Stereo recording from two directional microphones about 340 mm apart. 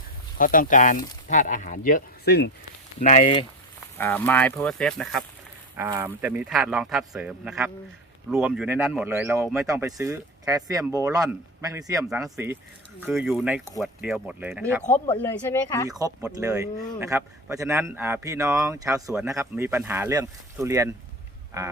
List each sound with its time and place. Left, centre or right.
0.3 s speech: left
3.9 s speech: centre
15.2 s speech: centre
15.9 s speech: centre